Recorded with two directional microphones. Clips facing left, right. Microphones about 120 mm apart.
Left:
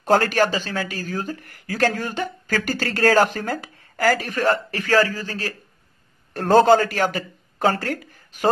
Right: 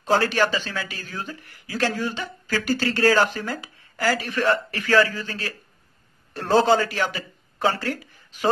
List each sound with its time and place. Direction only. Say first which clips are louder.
0.0 s speech: left 3 dB; 50° left (ahead or behind)